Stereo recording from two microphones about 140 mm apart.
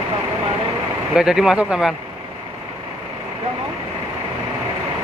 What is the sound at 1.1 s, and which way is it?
Speech, 5° right (ahead or behind).